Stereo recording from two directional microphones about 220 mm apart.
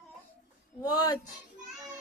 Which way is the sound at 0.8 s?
15° left (ahead or behind).